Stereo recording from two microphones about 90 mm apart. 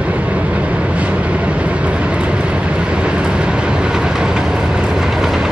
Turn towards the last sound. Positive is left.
turn(degrees=-5)  # may be behind; listen again after turning